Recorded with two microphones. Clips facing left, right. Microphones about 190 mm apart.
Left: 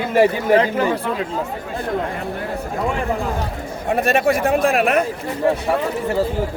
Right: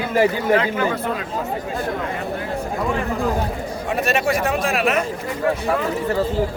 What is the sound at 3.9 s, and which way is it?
A man's voice, 55° left (ahead or behind).